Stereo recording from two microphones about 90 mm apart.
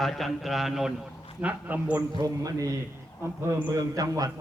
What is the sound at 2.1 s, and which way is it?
A man's voice, 45° right (ahead or behind).